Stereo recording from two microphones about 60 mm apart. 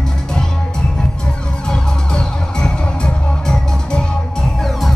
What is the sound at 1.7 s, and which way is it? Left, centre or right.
Music, centre.